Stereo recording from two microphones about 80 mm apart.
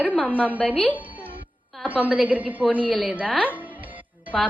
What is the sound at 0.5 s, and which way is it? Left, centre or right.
Speech, centre.